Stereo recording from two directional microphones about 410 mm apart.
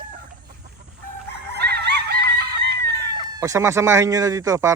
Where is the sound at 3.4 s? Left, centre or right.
Centre.